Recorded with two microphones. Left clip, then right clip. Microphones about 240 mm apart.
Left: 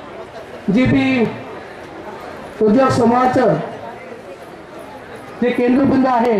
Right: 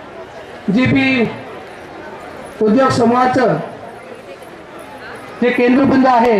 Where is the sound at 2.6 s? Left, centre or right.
Right.